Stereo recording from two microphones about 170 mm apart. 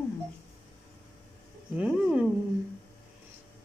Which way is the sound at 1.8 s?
5° right (ahead or behind).